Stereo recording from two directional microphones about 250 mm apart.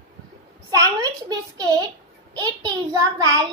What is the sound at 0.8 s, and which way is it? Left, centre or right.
A child's voice, centre.